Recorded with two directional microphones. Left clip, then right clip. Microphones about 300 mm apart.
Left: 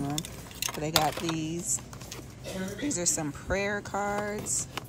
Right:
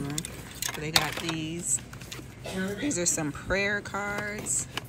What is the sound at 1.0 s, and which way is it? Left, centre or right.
Speech, centre.